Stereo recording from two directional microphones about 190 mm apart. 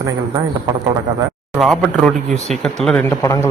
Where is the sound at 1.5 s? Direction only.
Centre (ahead or behind).